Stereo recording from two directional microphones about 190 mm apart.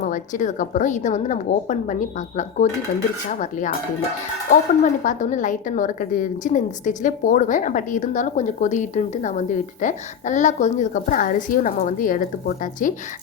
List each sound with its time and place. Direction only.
0.0 s a woman's voice: 40° left (ahead or behind)
4.8 s a woman's voice: 40° left (ahead or behind)